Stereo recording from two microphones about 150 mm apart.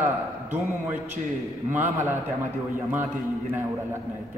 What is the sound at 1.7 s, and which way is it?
Speech, 15° right (ahead or behind).